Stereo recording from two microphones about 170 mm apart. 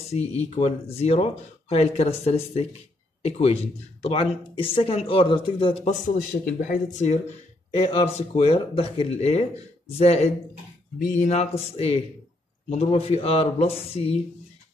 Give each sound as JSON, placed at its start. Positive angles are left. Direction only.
{"t": 0.1, "sound": "speech", "side_deg": 40}
{"t": 6.7, "sound": "speech", "side_deg": 45}
{"t": 11.0, "sound": "speech", "side_deg": 45}